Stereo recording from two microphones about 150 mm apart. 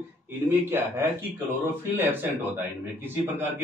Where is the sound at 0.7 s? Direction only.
15° right (ahead or behind).